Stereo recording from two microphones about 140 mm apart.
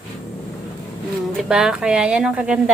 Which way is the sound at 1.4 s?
5° right (ahead or behind).